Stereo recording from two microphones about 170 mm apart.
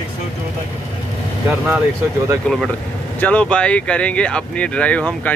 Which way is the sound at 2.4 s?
Centre (ahead or behind).